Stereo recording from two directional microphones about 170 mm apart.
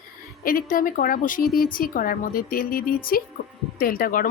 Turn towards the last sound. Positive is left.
turn(degrees=55)  # may be behind; listen again after turning